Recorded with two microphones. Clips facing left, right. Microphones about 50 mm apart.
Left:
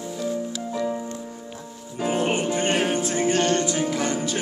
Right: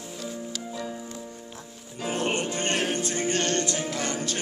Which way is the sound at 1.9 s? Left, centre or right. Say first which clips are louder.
Left 4 dB; centre.